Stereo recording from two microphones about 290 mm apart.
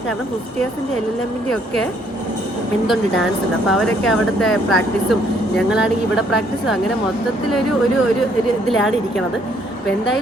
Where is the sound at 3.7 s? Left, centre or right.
Centre.